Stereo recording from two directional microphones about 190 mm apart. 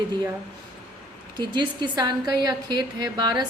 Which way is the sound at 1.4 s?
25° right (ahead or behind).